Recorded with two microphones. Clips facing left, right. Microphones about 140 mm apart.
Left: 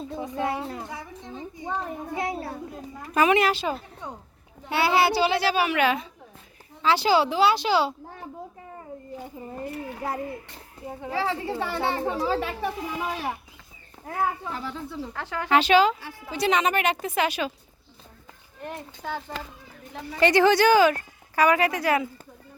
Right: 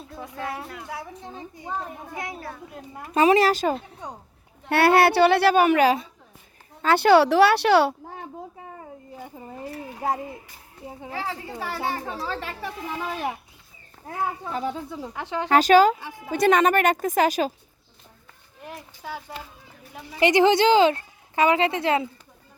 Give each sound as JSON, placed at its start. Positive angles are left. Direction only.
{"t": 0.0, "sound": "speech", "side_deg": 20}
{"t": 0.9, "sound": "a woman's voice", "side_deg": -5}
{"t": 2.1, "sound": "speech", "side_deg": 30}
{"t": 3.2, "sound": "speech", "side_deg": -35}
{"t": 4.7, "sound": "a woman's voice", "side_deg": -60}
{"t": 6.8, "sound": "a woman's voice", "side_deg": -55}
{"t": 11.1, "sound": "speech", "side_deg": 30}
{"t": 12.4, "sound": "a woman's voice", "side_deg": 5}
{"t": 14.9, "sound": "speech", "side_deg": -15}
{"t": 15.4, "sound": "speech", "side_deg": -40}
{"t": 16.0, "sound": "speech", "side_deg": -20}
{"t": 16.3, "sound": "speech", "side_deg": -50}
{"t": 18.6, "sound": "a woman's voice", "side_deg": -5}
{"t": 20.1, "sound": "speech", "side_deg": -15}